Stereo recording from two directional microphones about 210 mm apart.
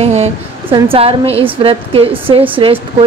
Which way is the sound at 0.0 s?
30° right (ahead or behind).